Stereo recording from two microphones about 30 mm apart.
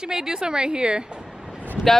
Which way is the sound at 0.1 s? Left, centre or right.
Right.